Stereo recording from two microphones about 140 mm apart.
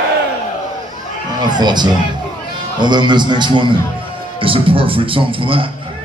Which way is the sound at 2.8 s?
30° right (ahead or behind).